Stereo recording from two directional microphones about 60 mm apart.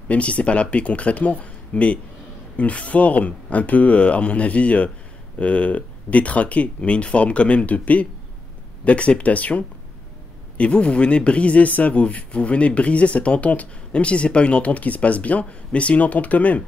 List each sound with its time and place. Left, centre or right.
0.1 s speech: left